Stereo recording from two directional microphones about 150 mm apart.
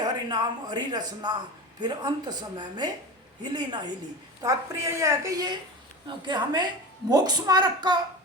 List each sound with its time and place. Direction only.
0.0 s speech: 30° right (ahead or behind)